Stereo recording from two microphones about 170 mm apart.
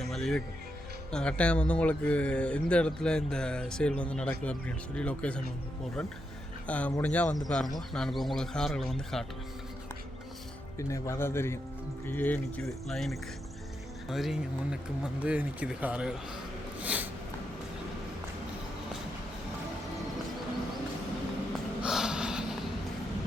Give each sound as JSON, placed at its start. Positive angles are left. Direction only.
{"t": 0.0, "sound": "music", "side_deg": 0}
{"t": 1.1, "sound": "speech", "side_deg": 5}
{"t": 6.7, "sound": "speech", "side_deg": 10}
{"t": 10.8, "sound": "speech", "side_deg": 20}
{"t": 16.8, "sound": "snort", "side_deg": -10}
{"t": 21.8, "sound": "snort", "side_deg": -5}